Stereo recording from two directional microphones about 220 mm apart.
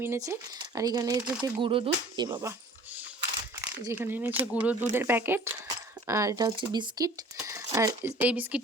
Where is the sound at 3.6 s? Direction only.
10° right (ahead or behind).